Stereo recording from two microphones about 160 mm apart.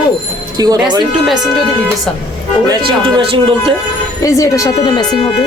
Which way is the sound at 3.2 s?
35° right (ahead or behind).